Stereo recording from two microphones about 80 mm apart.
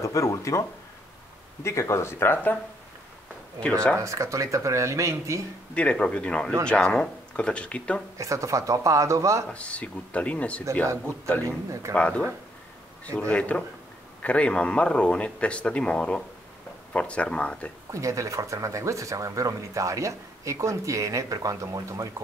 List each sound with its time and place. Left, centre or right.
0.0 s speech: left
3.6 s speech: centre
4.0 s speech: right
5.8 s speech: centre
8.2 s speech: right
9.5 s speech: centre
11.4 s speech: right
11.9 s speech: centre
13.3 s speech: centre
17.9 s speech: right